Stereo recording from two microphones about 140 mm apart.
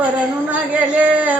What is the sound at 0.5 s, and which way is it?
Speech, 10° right (ahead or behind).